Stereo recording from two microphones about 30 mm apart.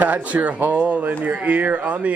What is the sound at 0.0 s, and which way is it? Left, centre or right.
Speech, right.